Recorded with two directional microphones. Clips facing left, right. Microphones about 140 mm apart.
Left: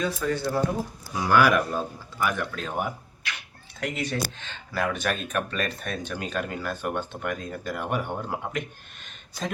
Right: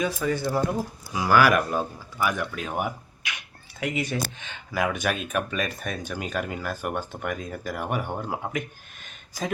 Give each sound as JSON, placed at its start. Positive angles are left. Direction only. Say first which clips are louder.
{"t": 0.0, "sound": "speech", "louder": "right 1 dB", "side_deg": -10}